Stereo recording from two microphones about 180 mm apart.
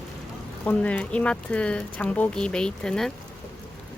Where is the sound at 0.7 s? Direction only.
10° left (ahead or behind).